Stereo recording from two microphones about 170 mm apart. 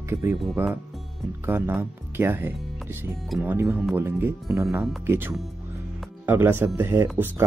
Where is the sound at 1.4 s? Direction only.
15° right (ahead or behind).